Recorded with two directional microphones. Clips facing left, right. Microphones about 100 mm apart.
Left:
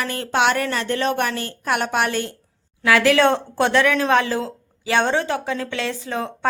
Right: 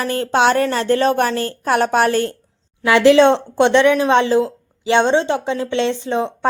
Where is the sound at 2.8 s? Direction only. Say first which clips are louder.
Right 5 dB; 25° right (ahead or behind).